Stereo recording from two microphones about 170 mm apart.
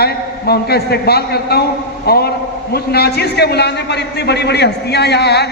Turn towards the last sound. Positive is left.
turn(degrees=75)  # may be behind; listen again after turning